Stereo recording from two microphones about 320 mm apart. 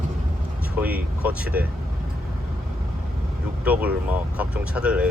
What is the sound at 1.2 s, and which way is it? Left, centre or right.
Speech, centre.